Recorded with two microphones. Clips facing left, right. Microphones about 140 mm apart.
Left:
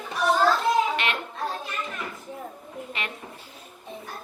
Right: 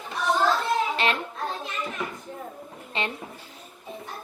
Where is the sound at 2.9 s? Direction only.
30° right (ahead or behind).